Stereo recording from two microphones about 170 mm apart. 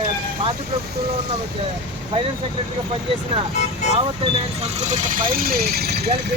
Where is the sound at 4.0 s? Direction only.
35° right (ahead or behind); by 6.3 s 70° right (ahead or behind).